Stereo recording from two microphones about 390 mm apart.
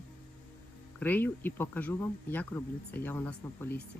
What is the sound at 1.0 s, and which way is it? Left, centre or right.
Speech, centre.